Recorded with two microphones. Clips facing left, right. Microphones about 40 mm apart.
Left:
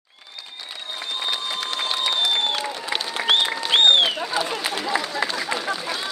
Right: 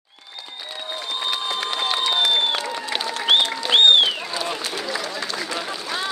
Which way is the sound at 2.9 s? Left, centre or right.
Centre.